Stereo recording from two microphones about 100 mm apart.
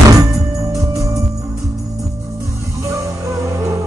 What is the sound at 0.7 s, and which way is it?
Music, 35° right (ahead or behind).